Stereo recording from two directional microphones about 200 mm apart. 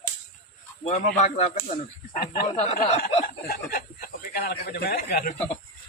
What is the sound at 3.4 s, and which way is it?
A man's voice, 50° left (ahead or behind).